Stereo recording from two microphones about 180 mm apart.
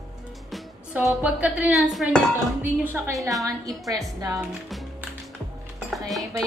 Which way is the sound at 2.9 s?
10° right (ahead or behind).